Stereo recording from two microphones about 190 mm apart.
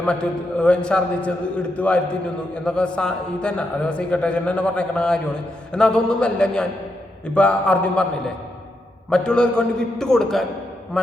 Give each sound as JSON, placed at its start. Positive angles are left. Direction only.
{"t": 0.0, "sound": "a man's voice", "side_deg": 5}
{"t": 9.0, "sound": "a man's voice", "side_deg": 5}